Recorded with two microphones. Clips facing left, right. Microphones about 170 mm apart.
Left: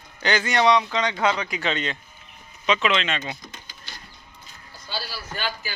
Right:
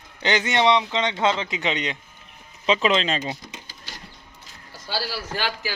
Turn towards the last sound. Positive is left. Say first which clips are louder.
# right 3 dB
turn(degrees=-75)  # may be behind; listen again after turning